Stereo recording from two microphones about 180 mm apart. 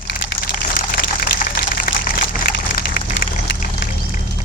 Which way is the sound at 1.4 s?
50° left (ahead or behind).